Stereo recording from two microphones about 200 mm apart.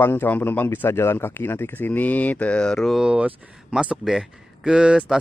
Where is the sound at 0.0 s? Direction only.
10° left (ahead or behind).